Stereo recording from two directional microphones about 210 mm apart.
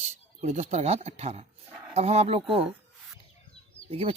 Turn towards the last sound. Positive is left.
turn(degrees=-25)  # may be behind; listen again after turning